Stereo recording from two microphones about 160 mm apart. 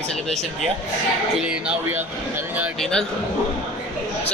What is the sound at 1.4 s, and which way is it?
Speech, 5° right (ahead or behind).